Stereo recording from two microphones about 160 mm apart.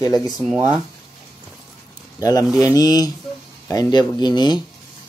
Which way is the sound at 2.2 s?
25° left (ahead or behind).